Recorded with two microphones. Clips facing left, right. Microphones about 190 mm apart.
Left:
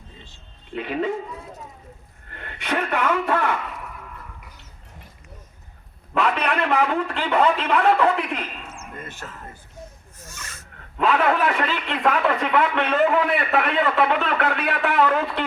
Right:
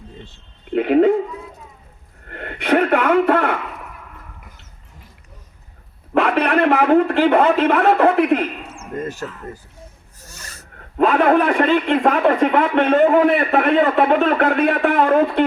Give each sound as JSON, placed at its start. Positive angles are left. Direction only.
{"t": 0.3, "sound": "speech", "side_deg": -60}
{"t": 2.3, "sound": "a sound", "side_deg": -60}
{"t": 6.1, "sound": "a man's voice", "side_deg": -55}
{"t": 8.8, "sound": "speech", "side_deg": -40}
{"t": 10.2, "sound": "dog", "side_deg": -35}
{"t": 11.0, "sound": "a man's voice", "side_deg": -50}